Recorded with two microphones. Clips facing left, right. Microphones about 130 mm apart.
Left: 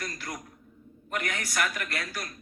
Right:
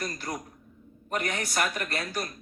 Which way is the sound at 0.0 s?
25° right (ahead or behind).